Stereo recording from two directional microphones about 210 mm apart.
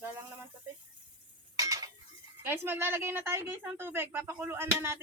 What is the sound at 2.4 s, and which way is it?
A woman's voice, 10° right (ahead or behind).